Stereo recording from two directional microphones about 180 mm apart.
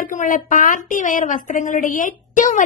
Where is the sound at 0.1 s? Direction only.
45° left (ahead or behind).